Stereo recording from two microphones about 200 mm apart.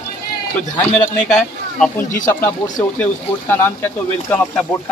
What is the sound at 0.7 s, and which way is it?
A man's voice, 5° left (ahead or behind).